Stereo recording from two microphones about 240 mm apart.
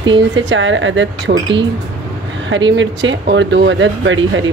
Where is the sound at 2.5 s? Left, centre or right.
Right.